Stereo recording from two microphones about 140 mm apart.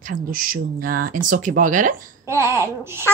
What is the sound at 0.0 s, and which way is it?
Speech, 80° right.